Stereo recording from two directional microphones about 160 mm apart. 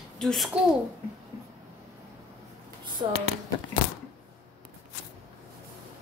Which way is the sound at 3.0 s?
35° right (ahead or behind).